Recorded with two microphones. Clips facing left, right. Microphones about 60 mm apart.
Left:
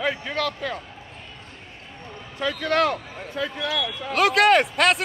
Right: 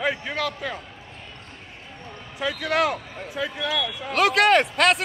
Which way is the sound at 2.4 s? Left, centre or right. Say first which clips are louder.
Left 1 dB; centre.